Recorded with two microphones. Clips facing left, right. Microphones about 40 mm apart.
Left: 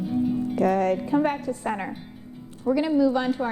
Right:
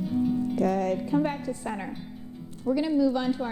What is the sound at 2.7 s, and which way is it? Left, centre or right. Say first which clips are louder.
Speech: left 3 dB; left.